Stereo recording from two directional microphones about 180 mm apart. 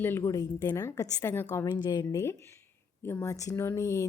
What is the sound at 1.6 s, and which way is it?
Speech, 25° left (ahead or behind).